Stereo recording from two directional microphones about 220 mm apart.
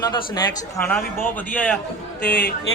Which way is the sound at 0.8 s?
5° left (ahead or behind).